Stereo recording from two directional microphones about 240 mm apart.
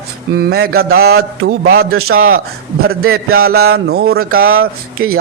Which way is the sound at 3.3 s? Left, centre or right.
Right.